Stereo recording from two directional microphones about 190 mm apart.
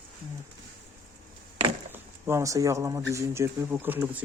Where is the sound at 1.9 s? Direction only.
15° right (ahead or behind).